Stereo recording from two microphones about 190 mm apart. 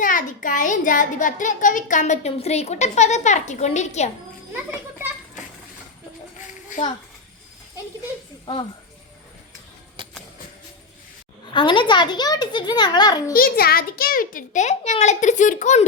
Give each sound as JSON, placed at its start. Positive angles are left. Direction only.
{"t": 0.0, "sound": "a child's voice", "side_deg": 45}
{"t": 6.7, "sound": "a child's voice", "side_deg": 40}
{"t": 10.0, "sound": "a sound", "side_deg": -25}
{"t": 11.5, "sound": "a child's voice", "side_deg": 25}
{"t": 13.3, "sound": "a child's voice", "side_deg": 50}